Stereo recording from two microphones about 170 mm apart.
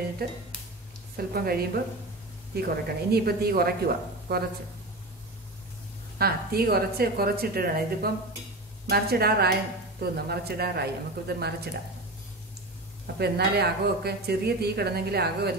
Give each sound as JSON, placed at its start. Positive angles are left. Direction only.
{"t": 0.2, "sound": "a woman's voice", "side_deg": -65}
{"t": 6.1, "sound": "a woman's voice", "side_deg": -65}
{"t": 13.0, "sound": "speech", "side_deg": -70}